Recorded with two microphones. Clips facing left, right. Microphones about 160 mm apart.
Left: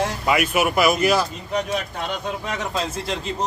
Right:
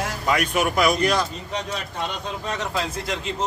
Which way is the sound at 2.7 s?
20° left (ahead or behind).